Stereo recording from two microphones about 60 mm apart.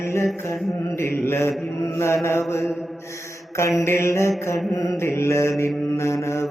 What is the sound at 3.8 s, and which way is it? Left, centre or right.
Mantra, left.